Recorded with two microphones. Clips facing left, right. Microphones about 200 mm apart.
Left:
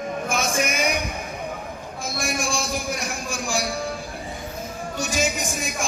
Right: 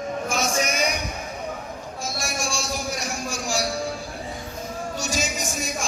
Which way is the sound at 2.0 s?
55° left (ahead or behind).